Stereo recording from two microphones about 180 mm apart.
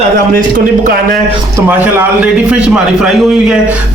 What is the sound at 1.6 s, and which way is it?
A man's voice, 10° right (ahead or behind).